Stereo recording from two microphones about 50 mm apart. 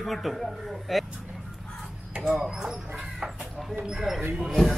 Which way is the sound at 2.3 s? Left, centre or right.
Centre.